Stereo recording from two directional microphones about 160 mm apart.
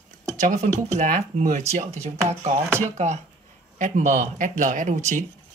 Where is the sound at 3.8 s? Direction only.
50° right (ahead or behind).